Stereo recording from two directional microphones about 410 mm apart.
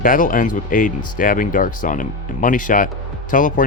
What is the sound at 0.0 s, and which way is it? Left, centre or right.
Speech, centre.